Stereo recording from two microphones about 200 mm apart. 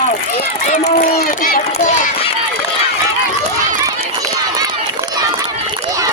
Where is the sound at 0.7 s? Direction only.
40° left (ahead or behind).